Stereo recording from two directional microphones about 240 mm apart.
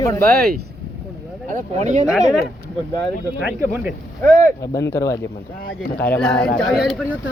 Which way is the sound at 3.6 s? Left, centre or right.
Centre.